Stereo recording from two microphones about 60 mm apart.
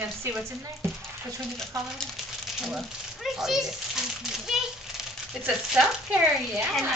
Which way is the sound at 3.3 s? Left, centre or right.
Centre.